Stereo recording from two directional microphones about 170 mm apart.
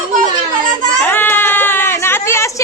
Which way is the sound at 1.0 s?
10° left (ahead or behind).